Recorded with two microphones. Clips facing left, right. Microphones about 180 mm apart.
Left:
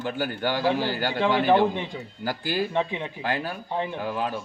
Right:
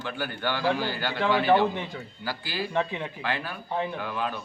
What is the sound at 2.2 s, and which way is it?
Speech, 45° left (ahead or behind).